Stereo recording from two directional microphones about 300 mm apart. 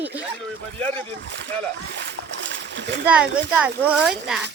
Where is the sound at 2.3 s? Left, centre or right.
Right.